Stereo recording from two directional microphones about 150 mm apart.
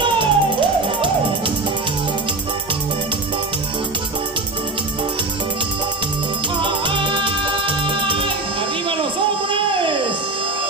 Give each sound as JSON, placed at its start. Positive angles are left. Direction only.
{"t": 0.0, "sound": "music", "side_deg": -35}
{"t": 6.6, "sound": "music", "side_deg": -35}
{"t": 9.5, "sound": "a sound", "side_deg": -35}